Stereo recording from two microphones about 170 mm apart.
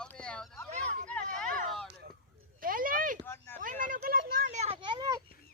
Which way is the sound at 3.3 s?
15° left (ahead or behind).